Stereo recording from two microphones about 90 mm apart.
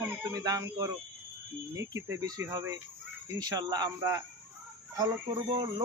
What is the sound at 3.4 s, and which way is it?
Speech, 45° right (ahead or behind).